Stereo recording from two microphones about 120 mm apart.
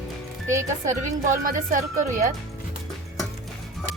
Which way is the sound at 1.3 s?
90° right.